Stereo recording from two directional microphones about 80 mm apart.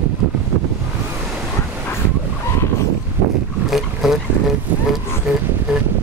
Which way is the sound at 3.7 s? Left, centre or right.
Centre.